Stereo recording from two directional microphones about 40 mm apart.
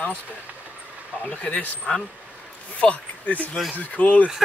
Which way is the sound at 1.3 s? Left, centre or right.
Left.